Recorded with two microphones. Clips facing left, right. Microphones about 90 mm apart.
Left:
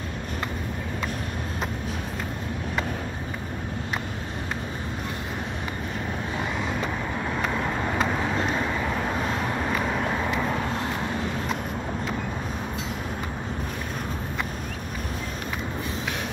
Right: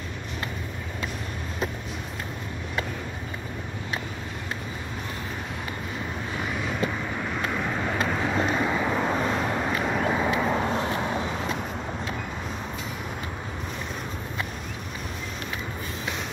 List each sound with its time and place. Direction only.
7.8 s vehicle: centre (ahead or behind)
8.8 s vehicle: 15° right (ahead or behind)
9.1 s vehicle: centre (ahead or behind)